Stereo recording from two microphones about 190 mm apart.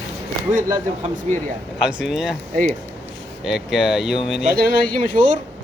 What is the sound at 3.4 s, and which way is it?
Speech, centre (ahead or behind).